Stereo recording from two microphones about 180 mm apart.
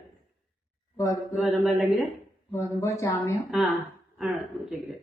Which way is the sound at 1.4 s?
Centre (ahead or behind).